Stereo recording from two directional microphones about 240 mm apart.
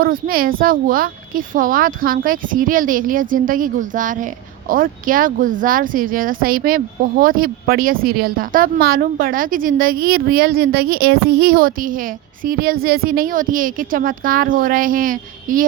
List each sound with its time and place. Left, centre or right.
0.0 s speech: right